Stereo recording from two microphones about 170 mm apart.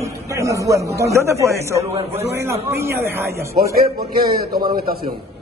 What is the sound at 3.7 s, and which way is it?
Speech, 60° right (ahead or behind).